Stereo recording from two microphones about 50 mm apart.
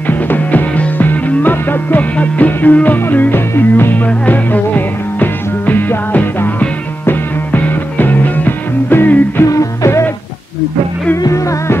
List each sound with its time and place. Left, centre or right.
0.0 s music: left
3.9 s music: left
9.4 s music: left
11.3 s music: left